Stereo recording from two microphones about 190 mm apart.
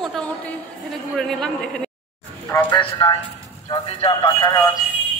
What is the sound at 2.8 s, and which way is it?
Speech, 25° left (ahead or behind).